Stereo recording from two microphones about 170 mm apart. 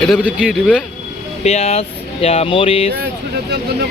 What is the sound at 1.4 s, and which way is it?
Speech, 40° left (ahead or behind).